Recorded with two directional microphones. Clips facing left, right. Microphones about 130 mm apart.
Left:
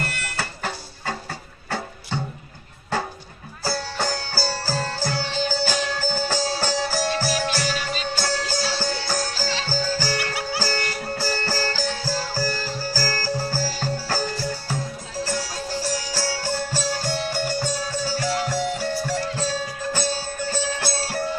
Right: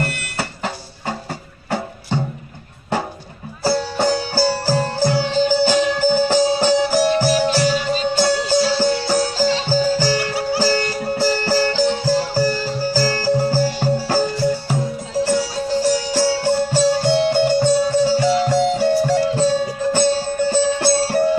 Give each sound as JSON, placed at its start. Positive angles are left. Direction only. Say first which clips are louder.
{"t": 0.2, "sound": "music", "louder": "right 4 dB", "side_deg": -20}
{"t": 3.6, "sound": "music", "louder": "right 8 dB", "side_deg": -20}
{"t": 10.2, "sound": "music", "louder": "right 7 dB", "side_deg": -35}
{"t": 10.6, "sound": "music", "louder": "right 8 dB", "side_deg": -20}
{"t": 15.8, "sound": "music", "louder": "right 11 dB", "side_deg": -20}